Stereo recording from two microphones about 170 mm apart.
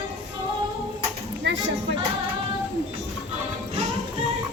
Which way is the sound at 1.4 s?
90° right.